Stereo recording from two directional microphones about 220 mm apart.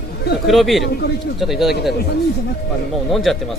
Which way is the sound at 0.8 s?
50° left (ahead or behind).